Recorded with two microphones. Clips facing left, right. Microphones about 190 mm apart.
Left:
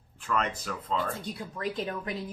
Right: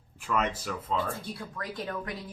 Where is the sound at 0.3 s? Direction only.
5° right (ahead or behind).